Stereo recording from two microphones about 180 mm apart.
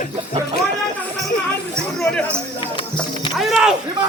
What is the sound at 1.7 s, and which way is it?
Chatter, 5° left (ahead or behind).